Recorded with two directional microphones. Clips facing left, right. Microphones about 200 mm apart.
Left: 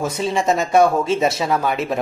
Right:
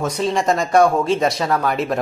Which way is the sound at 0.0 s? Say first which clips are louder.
Right 1 dB; 5° left (ahead or behind).